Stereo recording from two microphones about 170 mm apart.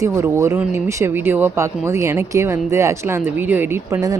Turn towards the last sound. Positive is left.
turn(degrees=-20)  # may be behind; listen again after turning